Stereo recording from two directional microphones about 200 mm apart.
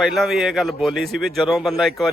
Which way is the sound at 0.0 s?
Centre (ahead or behind).